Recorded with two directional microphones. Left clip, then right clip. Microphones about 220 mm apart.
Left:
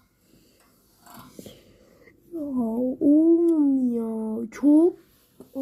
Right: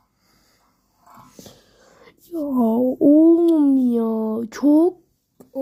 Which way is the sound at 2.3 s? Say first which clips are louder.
Right 8 dB; 65° right (ahead or behind).